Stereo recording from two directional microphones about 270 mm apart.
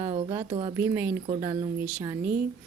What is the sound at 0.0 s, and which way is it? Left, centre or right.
Speech, centre.